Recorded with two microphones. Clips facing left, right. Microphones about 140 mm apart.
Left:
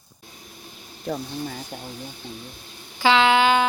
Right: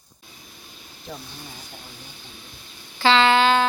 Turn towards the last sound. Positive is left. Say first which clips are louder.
# even
turn(degrees=10)  # may be behind; listen again after turning